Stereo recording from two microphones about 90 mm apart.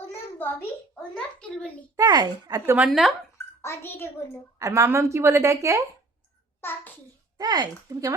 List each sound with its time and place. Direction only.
0.0 s a sound: 25° left (ahead or behind)
1.1 s a child's voice: 10° left (ahead or behind)
2.0 s speech: 50° right (ahead or behind)
2.9 s speech: centre (ahead or behind)
3.3 s a sound: 30° left (ahead or behind)
4.6 s a woman's voice: 30° right (ahead or behind)
6.6 s a child's voice: 25° left (ahead or behind)
7.3 s speech: 55° right (ahead or behind)
7.9 s a woman's voice: 40° right (ahead or behind)